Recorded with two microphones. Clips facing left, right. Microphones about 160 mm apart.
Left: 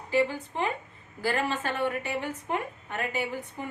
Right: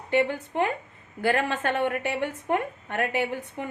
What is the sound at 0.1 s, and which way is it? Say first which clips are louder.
A woman's voice: right 2 dB; 60° right (ahead or behind).